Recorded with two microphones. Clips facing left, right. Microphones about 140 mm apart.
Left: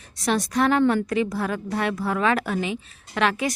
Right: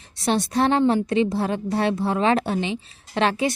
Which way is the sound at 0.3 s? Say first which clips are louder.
Right 1 dB; 30° right (ahead or behind).